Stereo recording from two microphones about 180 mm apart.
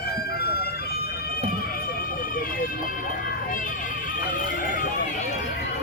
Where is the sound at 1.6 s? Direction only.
55° left (ahead or behind).